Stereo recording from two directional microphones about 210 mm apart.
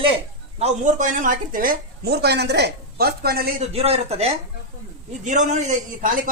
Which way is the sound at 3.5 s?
30° right (ahead or behind).